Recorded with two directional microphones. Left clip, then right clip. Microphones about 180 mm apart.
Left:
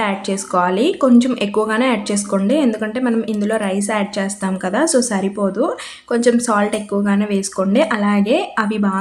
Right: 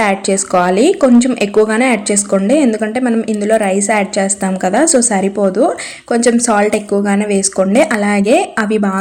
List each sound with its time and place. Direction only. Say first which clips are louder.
0.0 s speech: right 7 dB; 30° right (ahead or behind)